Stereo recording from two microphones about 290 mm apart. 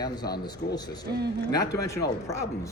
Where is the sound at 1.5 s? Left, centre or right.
Centre.